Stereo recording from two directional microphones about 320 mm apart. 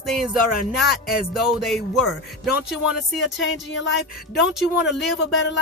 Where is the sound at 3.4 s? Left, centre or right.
Left.